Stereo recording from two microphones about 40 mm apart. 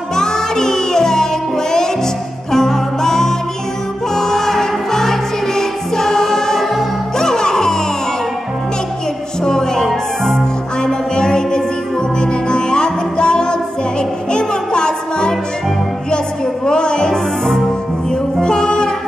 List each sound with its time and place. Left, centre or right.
0.1 s music: centre
9.4 s music: centre
16.6 s music: left
18.4 s music: centre